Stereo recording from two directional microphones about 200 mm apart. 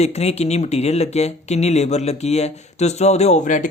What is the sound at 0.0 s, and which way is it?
Speech, 30° left (ahead or behind).